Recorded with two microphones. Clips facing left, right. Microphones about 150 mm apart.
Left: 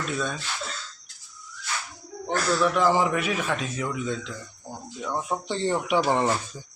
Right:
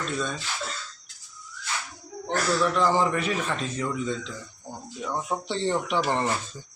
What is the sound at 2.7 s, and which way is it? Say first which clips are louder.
A man's voice: left 1 dB; 10° left (ahead or behind).